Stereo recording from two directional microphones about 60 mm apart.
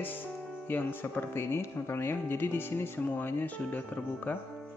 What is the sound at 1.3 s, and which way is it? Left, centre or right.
Speech, left.